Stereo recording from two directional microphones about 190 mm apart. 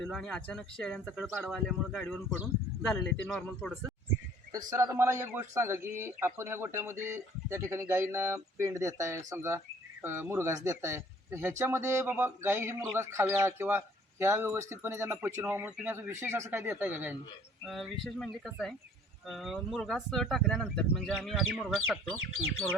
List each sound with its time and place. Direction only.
0.0 s speech: 5° left (ahead or behind)
4.7 s speech: 15° right (ahead or behind)
17.7 s speech: centre (ahead or behind)